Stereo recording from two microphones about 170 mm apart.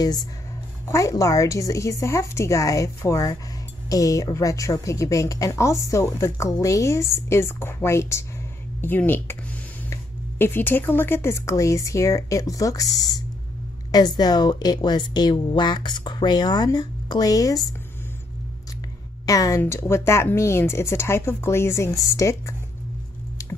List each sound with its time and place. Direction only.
0.0 s a woman's voice: 25° left (ahead or behind)
10.4 s a woman's voice: 10° left (ahead or behind)
19.2 s speech: 20° left (ahead or behind)